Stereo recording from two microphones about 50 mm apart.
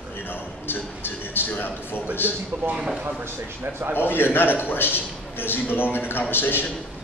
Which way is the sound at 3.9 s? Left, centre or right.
Left.